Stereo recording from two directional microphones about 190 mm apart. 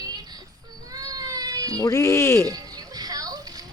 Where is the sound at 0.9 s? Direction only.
20° right (ahead or behind).